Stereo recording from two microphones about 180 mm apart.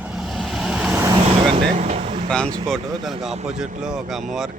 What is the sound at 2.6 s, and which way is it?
Speech, centre (ahead or behind).